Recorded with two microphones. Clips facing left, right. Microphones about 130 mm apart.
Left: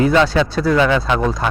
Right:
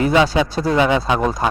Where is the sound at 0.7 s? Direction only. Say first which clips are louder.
Even; 20° right (ahead or behind).